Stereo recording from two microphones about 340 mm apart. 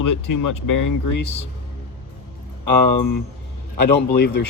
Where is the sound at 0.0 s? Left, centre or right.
Left.